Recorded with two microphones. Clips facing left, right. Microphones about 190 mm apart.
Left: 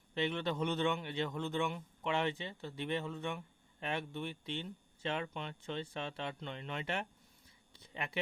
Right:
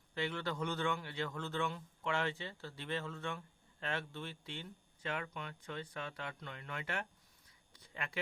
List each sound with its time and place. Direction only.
0.1 s a man's voice: 20° left (ahead or behind)